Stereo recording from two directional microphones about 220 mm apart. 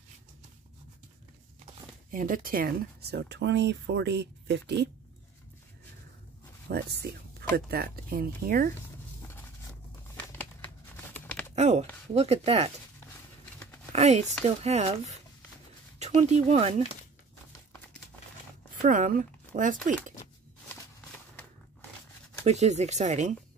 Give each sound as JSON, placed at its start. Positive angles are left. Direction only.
{"t": 2.0, "sound": "speech", "side_deg": -40}
{"t": 6.7, "sound": "speech", "side_deg": -45}
{"t": 9.2, "sound": "vehicle", "side_deg": 15}
{"t": 11.1, "sound": "typing", "side_deg": 5}
{"t": 11.5, "sound": "a sound", "side_deg": -30}
{"t": 12.1, "sound": "speech", "side_deg": -30}
{"t": 13.9, "sound": "speech", "side_deg": -30}
{"t": 18.8, "sound": "speech", "side_deg": -35}
{"t": 22.4, "sound": "speech", "side_deg": -30}